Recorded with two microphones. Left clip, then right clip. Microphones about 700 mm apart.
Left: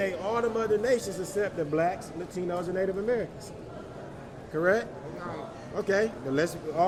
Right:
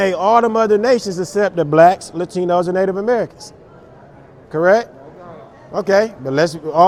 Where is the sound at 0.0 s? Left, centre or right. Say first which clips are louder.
Right 15 dB; right.